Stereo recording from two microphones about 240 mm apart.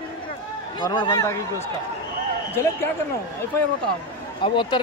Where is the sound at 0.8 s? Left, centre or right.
Centre.